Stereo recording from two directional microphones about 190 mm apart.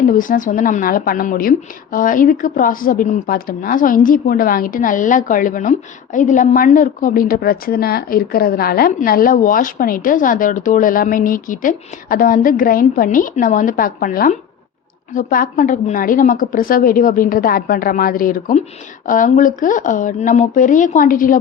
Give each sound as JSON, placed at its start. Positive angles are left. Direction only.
{"t": 0.1, "sound": "a woman's voice", "side_deg": 45}